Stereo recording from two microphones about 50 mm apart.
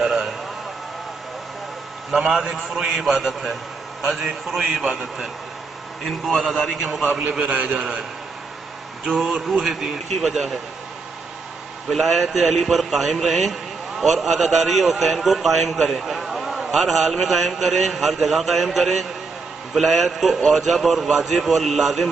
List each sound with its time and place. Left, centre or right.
0.0 s a man's voice: centre
2.0 s a man's voice: centre
6.0 s a man's voice: centre
7.3 s a man's voice: right
9.0 s a man's voice: centre
11.9 s a man's voice: centre